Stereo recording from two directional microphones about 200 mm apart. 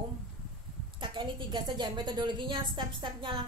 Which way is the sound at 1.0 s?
25° right (ahead or behind).